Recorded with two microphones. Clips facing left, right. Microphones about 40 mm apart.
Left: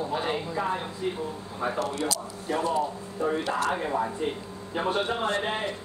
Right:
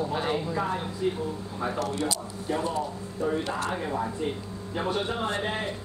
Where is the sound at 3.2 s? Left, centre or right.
Left.